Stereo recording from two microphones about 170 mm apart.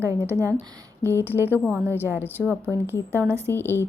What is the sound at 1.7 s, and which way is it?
A woman's voice, 15° right (ahead or behind).